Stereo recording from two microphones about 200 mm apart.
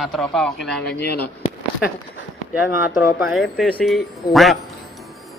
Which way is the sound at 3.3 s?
Centre (ahead or behind).